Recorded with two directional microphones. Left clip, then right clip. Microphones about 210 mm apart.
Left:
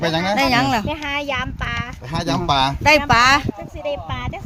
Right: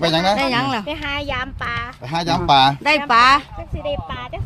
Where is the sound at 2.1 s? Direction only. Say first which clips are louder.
Right 4 dB; 45° right (ahead or behind).